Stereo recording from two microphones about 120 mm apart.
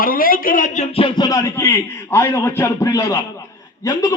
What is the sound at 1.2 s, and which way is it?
A man's voice, 25° left (ahead or behind).